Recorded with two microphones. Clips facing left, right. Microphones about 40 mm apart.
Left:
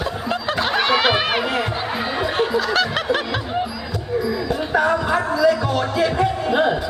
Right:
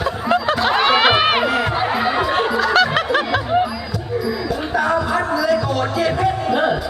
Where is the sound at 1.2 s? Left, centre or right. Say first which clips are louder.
Right 4 dB; right.